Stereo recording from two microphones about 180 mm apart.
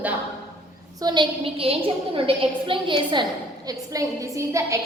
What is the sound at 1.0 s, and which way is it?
A woman's voice, 25° right (ahead or behind).